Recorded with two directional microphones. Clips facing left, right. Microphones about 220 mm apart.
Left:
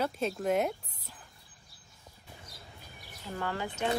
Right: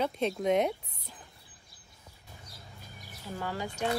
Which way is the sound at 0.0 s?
5° left (ahead or behind).